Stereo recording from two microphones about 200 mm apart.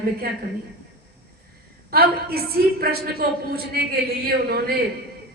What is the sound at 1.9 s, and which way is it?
A man's voice, 50° right (ahead or behind).